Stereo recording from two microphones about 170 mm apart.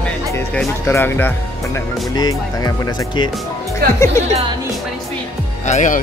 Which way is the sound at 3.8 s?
65° right (ahead or behind).